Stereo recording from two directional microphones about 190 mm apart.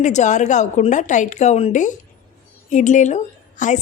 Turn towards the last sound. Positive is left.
turn(degrees=40)  # may be behind; listen again after turning